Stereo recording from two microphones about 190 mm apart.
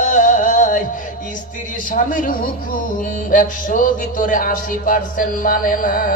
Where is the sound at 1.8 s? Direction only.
45° left (ahead or behind).